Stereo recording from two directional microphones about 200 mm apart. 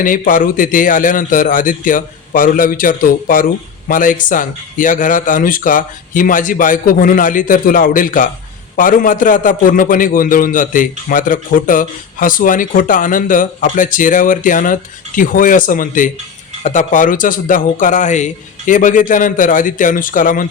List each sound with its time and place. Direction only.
0.0 s a man's voice: 45° left (ahead or behind)